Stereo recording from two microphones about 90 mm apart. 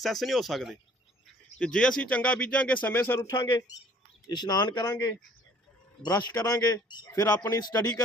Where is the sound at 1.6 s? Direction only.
10° left (ahead or behind).